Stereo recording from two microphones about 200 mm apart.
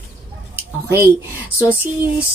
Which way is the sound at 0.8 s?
15° right (ahead or behind).